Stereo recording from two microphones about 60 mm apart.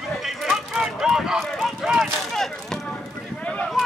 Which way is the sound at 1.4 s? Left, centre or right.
Centre.